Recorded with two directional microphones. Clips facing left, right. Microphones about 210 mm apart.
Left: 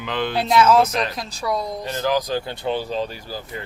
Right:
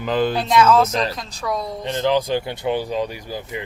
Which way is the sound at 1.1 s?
10° left (ahead or behind).